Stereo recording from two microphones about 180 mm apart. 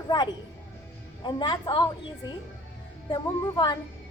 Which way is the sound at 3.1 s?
25° left (ahead or behind).